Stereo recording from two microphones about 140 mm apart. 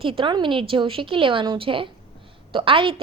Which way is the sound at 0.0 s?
40° right (ahead or behind).